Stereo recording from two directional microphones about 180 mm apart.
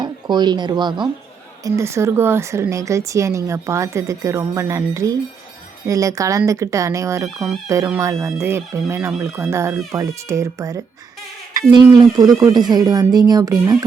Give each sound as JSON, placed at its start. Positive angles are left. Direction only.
{"t": 0.0, "sound": "a woman's voice", "side_deg": -25}